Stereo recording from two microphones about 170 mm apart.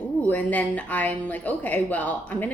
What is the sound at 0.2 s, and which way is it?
Speech, 10° left (ahead or behind).